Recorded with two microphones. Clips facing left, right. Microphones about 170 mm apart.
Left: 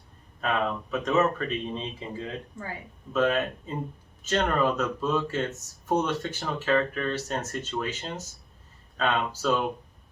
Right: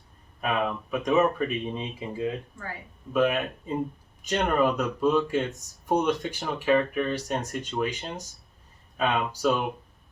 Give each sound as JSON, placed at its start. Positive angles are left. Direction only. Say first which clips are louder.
{"t": 0.4, "sound": "speech", "louder": "even", "side_deg": -10}
{"t": 2.5, "sound": "speech", "louder": "left 1 dB", "side_deg": 20}
{"t": 3.1, "sound": "speech", "louder": "right 1 dB", "side_deg": -15}